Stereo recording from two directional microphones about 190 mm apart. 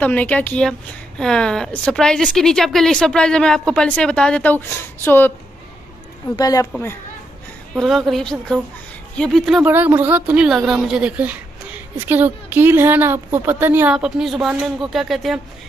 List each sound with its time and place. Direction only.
0.0 s a woman's voice: 10° left (ahead or behind)
6.3 s a woman's voice: 20° left (ahead or behind)
7.7 s a woman's voice: centre (ahead or behind)
9.6 s a woman's voice: 10° right (ahead or behind)